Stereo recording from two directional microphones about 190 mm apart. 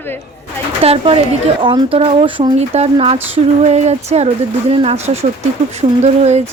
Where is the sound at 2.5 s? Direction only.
35° right (ahead or behind).